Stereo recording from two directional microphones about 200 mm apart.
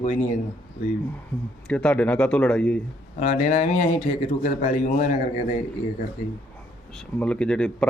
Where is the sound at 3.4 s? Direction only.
40° left (ahead or behind).